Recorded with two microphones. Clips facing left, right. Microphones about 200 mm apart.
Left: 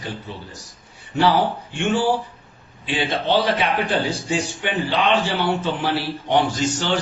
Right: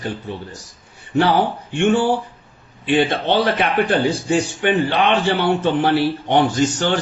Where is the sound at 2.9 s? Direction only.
55° right (ahead or behind).